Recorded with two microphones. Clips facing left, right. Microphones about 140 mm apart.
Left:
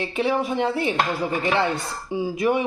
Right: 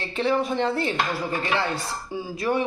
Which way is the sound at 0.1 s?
10° left (ahead or behind).